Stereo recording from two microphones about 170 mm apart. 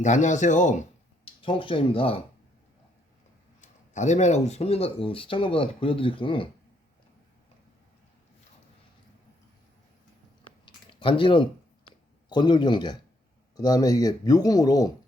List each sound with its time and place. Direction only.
0.0 s speech: 45° left (ahead or behind)
1.2 s speech: 30° left (ahead or behind)
3.6 s speech: 45° left (ahead or behind)
11.0 s speech: 30° left (ahead or behind)